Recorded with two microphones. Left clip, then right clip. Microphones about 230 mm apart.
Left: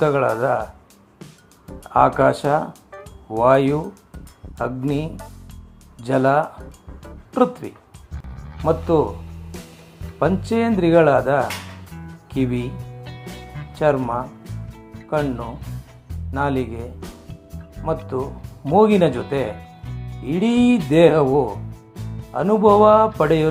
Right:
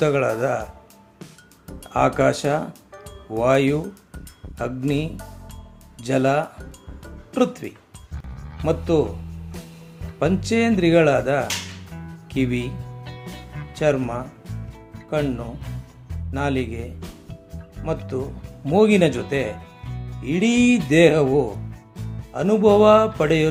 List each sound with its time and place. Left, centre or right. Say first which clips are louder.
0.0 s speech: left 2 dB; centre
1.2 s music: even; centre
1.9 s speech: left 3 dB; centre
3.8 s speech: left 2 dB; centre
4.5 s speech: left 1 dB; centre
8.1 s music: left 1 dB; centre
8.6 s speech: left 2 dB; centre
11.9 s music: even; centre
12.4 s speech: left 1 dB; centre
13.1 s music: left 1 dB; centre
13.7 s speech: left 2 dB; centre
16.3 s speech: left 2 dB; centre